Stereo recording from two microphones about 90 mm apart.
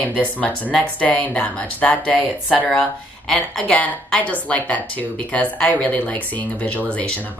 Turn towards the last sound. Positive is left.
turn(degrees=15)  # may be behind; listen again after turning